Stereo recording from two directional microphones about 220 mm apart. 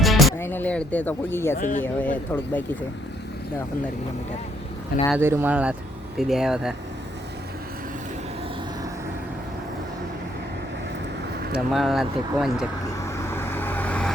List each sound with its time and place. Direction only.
0.0 s music: centre (ahead or behind)
0.3 s speech: 10° left (ahead or behind)
1.5 s speech: 35° left (ahead or behind)
1.8 s speech: 10° left (ahead or behind)
5.1 s speech: 10° right (ahead or behind)
11.5 s speech: centre (ahead or behind)
13.3 s vehicle: 10° left (ahead or behind)